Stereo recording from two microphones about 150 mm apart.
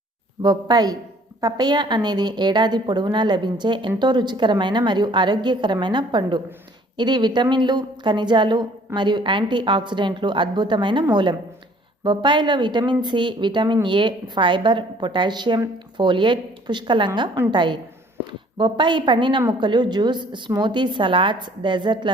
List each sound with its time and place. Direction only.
0.4 s a woman's voice: 25° right (ahead or behind)